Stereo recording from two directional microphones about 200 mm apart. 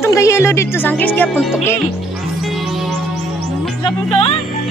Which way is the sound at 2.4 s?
Centre (ahead or behind).